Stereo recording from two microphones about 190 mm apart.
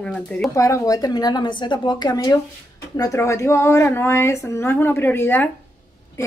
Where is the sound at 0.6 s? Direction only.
15° left (ahead or behind).